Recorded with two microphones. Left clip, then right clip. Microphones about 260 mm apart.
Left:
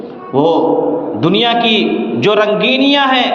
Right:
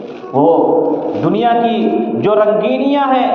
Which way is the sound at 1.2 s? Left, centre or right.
Left.